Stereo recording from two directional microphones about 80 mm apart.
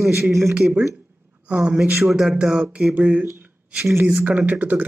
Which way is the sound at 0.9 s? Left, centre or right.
Centre.